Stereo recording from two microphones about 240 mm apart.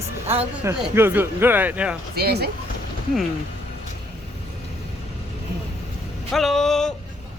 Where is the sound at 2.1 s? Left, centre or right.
Right.